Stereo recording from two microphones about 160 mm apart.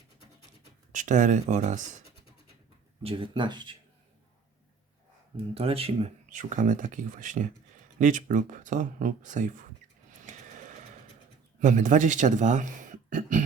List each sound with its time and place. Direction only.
0.9 s speech: 50° right (ahead or behind)
3.0 s speech: 35° right (ahead or behind)
5.5 s speech: 35° right (ahead or behind)
10.2 s a sound: 50° right (ahead or behind)
11.6 s speech: 50° right (ahead or behind)